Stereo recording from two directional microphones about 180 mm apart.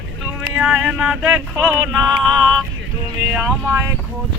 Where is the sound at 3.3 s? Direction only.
10° right (ahead or behind).